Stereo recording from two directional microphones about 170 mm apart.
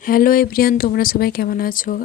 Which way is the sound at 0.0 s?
55° left (ahead or behind).